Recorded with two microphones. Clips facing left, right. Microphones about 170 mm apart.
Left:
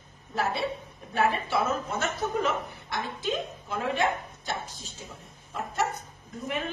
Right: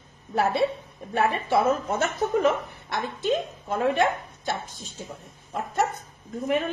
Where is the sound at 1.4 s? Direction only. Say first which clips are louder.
Right 6 dB; 50° right (ahead or behind).